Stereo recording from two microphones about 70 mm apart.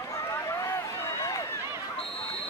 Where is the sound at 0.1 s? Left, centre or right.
Left.